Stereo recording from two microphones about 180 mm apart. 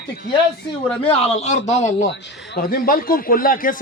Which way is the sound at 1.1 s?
35° left (ahead or behind).